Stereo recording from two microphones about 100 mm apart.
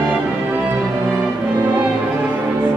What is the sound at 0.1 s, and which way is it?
Music, 15° right (ahead or behind).